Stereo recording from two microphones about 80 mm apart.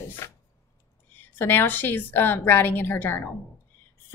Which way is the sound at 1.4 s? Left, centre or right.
Left.